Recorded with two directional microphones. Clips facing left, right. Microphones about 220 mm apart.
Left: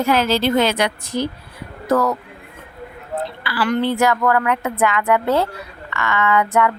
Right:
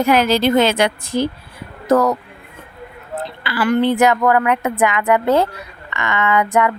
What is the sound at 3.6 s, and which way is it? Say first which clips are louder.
Speech: right 3 dB; 15° right (ahead or behind).